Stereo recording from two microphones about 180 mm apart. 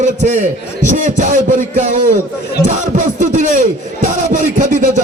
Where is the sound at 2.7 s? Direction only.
40° right (ahead or behind).